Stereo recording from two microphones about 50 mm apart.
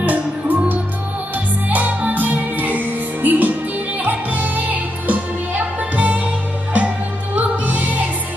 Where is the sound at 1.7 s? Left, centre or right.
Right.